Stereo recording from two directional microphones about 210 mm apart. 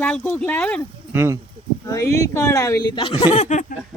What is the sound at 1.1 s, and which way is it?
Speech, 10° right (ahead or behind).